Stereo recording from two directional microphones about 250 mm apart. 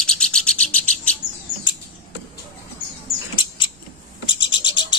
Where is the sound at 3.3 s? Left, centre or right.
Centre.